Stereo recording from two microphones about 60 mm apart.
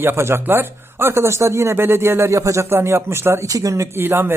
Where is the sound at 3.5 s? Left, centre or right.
Right.